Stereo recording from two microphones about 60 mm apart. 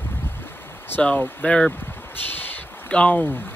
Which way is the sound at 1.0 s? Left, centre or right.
Left.